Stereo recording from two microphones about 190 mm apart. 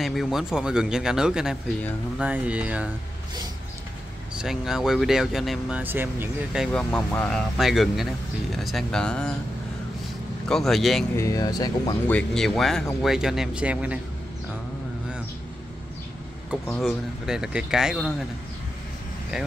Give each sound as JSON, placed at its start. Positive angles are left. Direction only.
{"t": 0.0, "sound": "speech", "side_deg": 0}
{"t": 4.4, "sound": "speech", "side_deg": 0}
{"t": 10.5, "sound": "speech", "side_deg": 0}
{"t": 11.1, "sound": "speech", "side_deg": 20}
{"t": 12.1, "sound": "speech", "side_deg": 5}
{"t": 16.6, "sound": "speech", "side_deg": 0}